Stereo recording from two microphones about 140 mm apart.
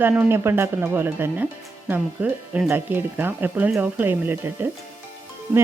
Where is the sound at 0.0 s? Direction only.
15° right (ahead or behind).